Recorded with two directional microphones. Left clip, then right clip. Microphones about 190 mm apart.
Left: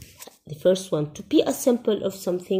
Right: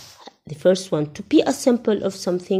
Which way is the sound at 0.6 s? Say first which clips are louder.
Right 3 dB; 20° right (ahead or behind).